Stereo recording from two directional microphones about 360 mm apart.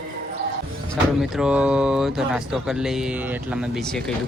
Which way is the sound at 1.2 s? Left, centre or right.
Centre.